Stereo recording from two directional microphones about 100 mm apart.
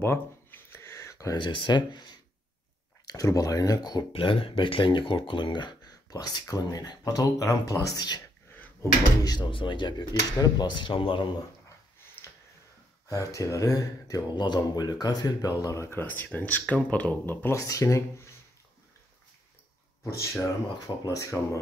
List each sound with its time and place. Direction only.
0.0 s a sound: 25° left (ahead or behind)
1.3 s speech: 55° left (ahead or behind)
3.1 s speech: 35° left (ahead or behind)
4.1 s speech: 65° left (ahead or behind); by 8.2 s 40° left (ahead or behind)
8.5 s drawer open or close: 20° left (ahead or behind)
9.2 s speech: 45° left (ahead or behind)
9.5 s speech: 55° left (ahead or behind)
10.8 s speech: 60° left (ahead or behind)
13.1 s speech: 35° left (ahead or behind)
17.6 s speech: 35° left (ahead or behind)
20.8 s speech: 40° left (ahead or behind)